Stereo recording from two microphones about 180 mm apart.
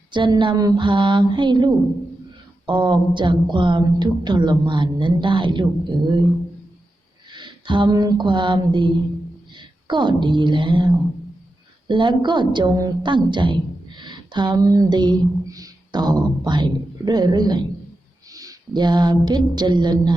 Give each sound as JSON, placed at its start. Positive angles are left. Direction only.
{"t": 0.1, "sound": "a woman's voice", "side_deg": -25}
{"t": 7.3, "sound": "a sound", "side_deg": -25}
{"t": 9.6, "sound": "a woman's voice", "side_deg": -25}